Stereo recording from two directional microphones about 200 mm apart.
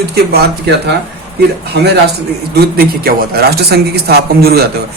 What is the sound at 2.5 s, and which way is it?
Speech, 50° right (ahead or behind).